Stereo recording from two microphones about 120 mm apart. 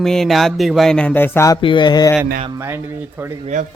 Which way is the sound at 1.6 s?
40° left (ahead or behind).